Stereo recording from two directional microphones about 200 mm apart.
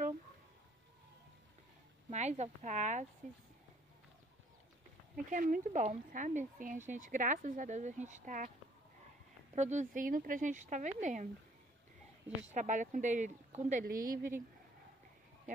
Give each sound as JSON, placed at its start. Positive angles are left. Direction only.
{"t": 2.0, "sound": "speech", "side_deg": -35}
{"t": 5.1, "sound": "speech", "side_deg": -45}
{"t": 9.6, "sound": "speech", "side_deg": -35}
{"t": 12.5, "sound": "speech", "side_deg": -40}